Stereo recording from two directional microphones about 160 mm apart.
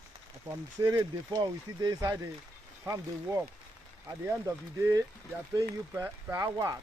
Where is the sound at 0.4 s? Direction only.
20° right (ahead or behind).